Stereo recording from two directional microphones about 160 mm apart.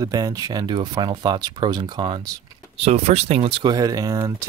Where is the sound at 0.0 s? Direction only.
20° right (ahead or behind).